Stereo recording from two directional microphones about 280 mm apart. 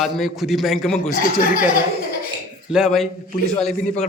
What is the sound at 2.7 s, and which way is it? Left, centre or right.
Speech, centre.